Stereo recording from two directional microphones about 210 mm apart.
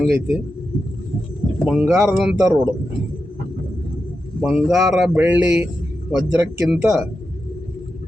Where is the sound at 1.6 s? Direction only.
5° right (ahead or behind).